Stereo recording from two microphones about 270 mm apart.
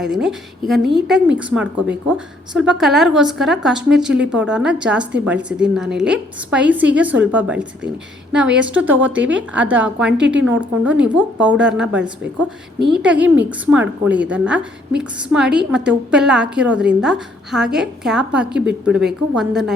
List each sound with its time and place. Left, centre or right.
0.0 s a woman's voice: centre
10.1 s a woman's voice: right
10.3 s a woman's voice: centre